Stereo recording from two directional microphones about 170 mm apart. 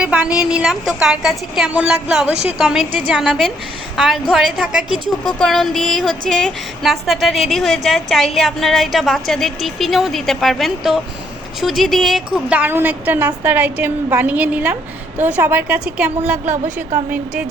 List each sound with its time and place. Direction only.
0.0 s a woman's voice: 5° right (ahead or behind)
2.3 s a woman's voice: 40° right (ahead or behind)
2.6 s a woman's voice: 5° right (ahead or behind)
16.5 s a woman's voice: 45° right (ahead or behind)